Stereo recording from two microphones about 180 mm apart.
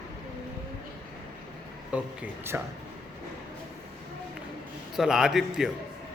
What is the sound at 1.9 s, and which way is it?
Speech, 10° right (ahead or behind).